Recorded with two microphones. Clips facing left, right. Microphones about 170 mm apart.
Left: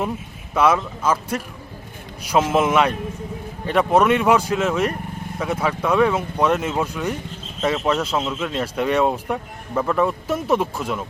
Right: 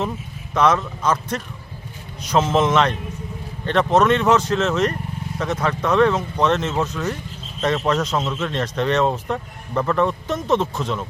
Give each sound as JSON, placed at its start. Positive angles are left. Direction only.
{"t": 0.5, "sound": "speech", "side_deg": 10}